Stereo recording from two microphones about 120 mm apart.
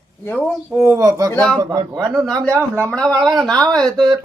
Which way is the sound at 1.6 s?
35° right (ahead or behind).